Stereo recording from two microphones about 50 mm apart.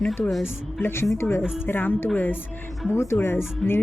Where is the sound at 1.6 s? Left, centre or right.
Left.